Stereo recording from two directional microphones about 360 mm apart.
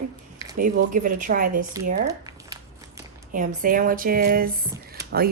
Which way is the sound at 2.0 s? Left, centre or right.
Centre.